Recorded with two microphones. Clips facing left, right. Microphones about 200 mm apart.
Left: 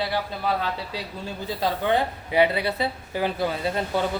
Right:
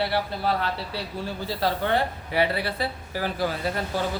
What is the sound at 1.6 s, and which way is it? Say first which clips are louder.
Speech: left 1 dB; 15° left (ahead or behind).